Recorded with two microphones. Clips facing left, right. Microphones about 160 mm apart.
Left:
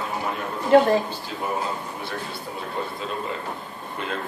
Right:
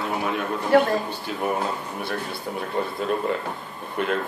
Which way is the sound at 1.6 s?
60° right (ahead or behind).